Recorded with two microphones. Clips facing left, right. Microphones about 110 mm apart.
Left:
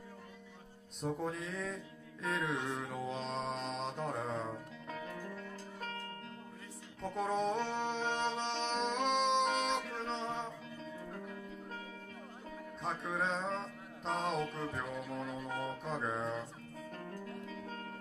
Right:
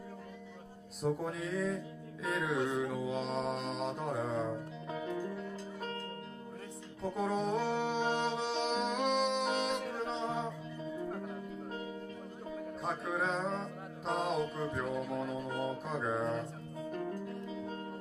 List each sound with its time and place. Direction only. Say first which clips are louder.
1.0 s mantra: right 3 dB; centre (ahead or behind)
4.8 s music: right 6 dB; 15° right (ahead or behind)
7.0 s music: right 1 dB; centre (ahead or behind)
12.8 s mantra: right 1 dB; centre (ahead or behind)
14.5 s music: right 4 dB; 10° right (ahead or behind)
16.9 s music: right 7 dB; 15° right (ahead or behind)